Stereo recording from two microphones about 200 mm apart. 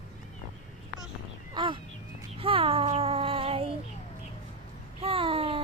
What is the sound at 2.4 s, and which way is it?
Child singing, 25° right (ahead or behind).